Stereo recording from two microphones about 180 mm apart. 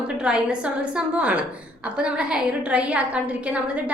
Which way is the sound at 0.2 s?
5° right (ahead or behind).